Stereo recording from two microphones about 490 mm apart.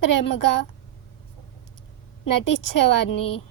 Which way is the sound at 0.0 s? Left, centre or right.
Left.